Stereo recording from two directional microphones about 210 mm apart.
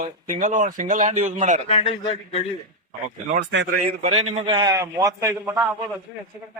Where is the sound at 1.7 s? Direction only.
25° left (ahead or behind).